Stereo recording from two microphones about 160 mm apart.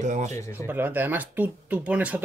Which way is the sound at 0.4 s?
15° left (ahead or behind).